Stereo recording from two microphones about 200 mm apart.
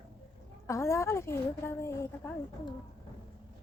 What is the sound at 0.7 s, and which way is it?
A woman's voice, 15° left (ahead or behind).